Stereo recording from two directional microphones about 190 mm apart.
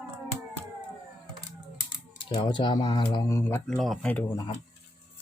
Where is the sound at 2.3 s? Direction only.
25° left (ahead or behind).